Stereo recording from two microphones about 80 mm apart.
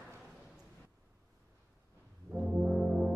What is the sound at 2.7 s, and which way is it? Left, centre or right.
Brass instrument, centre.